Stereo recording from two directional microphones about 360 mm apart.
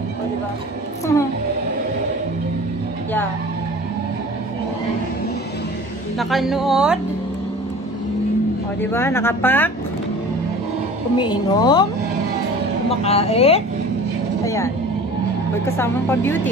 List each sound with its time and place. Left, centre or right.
6.1 s a woman's voice: centre
8.9 s speech: centre
11.1 s speech: centre
13.0 s speech: centre
14.4 s vehicle: centre
15.6 s speech: centre